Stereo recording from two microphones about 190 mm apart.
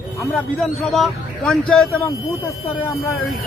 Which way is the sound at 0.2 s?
Centre (ahead or behind).